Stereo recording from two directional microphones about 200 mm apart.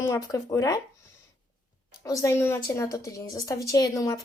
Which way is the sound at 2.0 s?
15° left (ahead or behind).